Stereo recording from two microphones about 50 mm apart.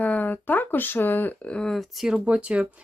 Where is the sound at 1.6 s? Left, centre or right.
Centre.